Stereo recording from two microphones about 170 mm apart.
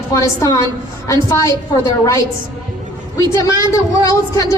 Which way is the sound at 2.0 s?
20° left (ahead or behind).